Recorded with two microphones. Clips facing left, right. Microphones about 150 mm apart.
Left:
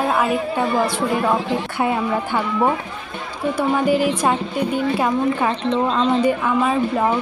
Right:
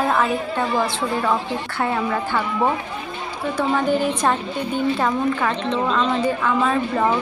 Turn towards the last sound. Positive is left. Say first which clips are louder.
# left 1 dB
turn(degrees=10)  # may be behind; listen again after turning